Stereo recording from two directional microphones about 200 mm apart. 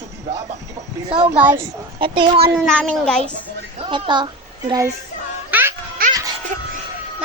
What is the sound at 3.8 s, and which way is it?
A child's voice, 25° right (ahead or behind).